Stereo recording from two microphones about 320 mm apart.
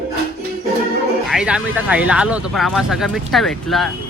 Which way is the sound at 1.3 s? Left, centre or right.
Centre.